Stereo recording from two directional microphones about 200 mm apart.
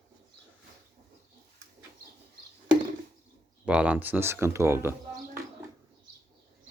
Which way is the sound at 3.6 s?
5° right (ahead or behind).